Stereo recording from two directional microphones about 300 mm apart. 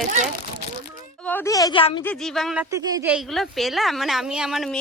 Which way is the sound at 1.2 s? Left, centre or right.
Centre.